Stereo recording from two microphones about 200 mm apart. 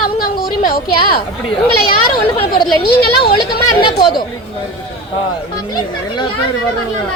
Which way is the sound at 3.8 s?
25° left (ahead or behind).